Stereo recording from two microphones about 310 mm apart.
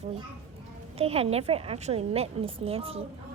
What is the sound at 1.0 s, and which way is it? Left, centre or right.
A woman's voice, centre.